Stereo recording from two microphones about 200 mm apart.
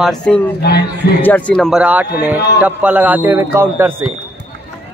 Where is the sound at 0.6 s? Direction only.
55° left (ahead or behind).